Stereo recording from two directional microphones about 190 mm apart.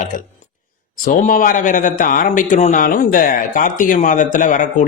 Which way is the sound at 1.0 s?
45° left (ahead or behind).